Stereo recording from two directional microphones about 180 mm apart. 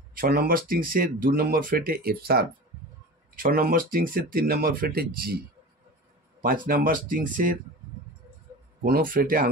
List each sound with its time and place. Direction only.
0.1 s speech: 55° right (ahead or behind)
6.4 s speech: 50° right (ahead or behind)
8.8 s speech: 50° right (ahead or behind)